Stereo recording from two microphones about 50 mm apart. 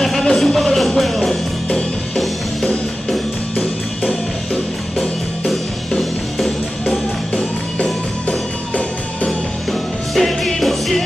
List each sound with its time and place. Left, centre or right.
0.0 s music: centre
5.5 s music: centre
8.3 s music: left
9.7 s music: centre